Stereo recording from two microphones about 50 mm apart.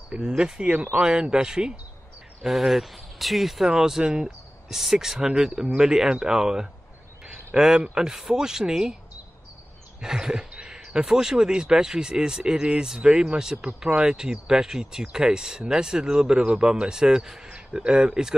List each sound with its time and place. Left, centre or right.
0.4 s speech: centre
0.7 s speech: right
1.0 s speech: centre
9.9 s a sound: centre
10.8 s speech: centre